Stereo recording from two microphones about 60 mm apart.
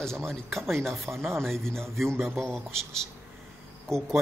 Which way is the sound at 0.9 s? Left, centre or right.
Right.